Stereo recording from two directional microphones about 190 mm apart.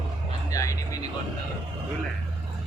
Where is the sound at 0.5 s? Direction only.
15° left (ahead or behind).